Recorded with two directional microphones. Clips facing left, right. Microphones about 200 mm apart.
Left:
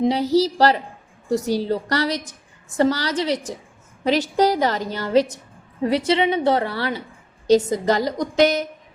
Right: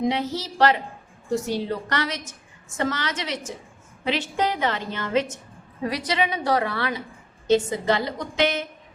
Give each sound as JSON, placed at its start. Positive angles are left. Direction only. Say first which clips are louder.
{"t": 0.0, "sound": "a woman's voice", "louder": "left 7 dB", "side_deg": 35}